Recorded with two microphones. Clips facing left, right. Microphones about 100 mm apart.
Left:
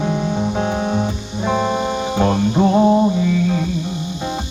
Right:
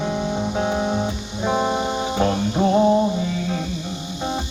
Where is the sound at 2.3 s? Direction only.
25° left (ahead or behind).